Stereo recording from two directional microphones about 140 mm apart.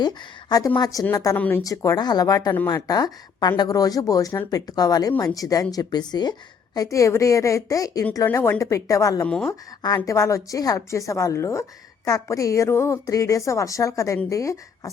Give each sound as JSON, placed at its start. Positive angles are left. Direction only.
{"t": 0.0, "sound": "a woman's voice", "side_deg": 30}
{"t": 9.2, "sound": "speech", "side_deg": 5}
{"t": 9.5, "sound": "a woman's voice", "side_deg": 25}